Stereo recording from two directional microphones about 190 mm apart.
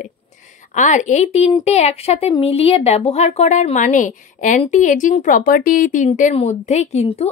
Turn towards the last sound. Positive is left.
turn(degrees=35)  # may be behind; listen again after turning